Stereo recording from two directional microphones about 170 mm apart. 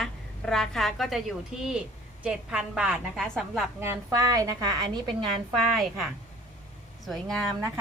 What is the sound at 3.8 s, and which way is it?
A woman's voice, 15° right (ahead or behind).